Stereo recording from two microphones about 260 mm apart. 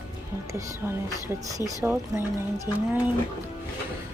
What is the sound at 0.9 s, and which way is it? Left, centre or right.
Speech, centre.